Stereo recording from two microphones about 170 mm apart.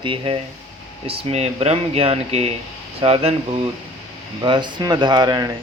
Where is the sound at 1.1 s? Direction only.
35° right (ahead or behind).